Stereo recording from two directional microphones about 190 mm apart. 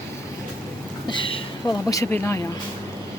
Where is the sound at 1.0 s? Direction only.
25° left (ahead or behind).